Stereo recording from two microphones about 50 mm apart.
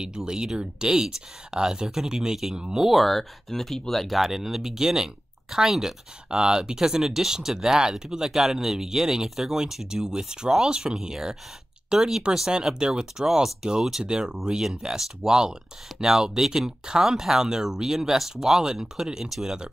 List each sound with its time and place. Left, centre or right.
0.0 s speech: centre
2.9 s speech: centre